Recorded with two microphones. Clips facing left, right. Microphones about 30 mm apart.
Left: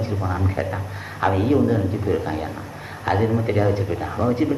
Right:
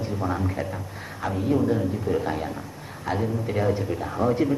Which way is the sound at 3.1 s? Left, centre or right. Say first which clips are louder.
Left 6 dB; left.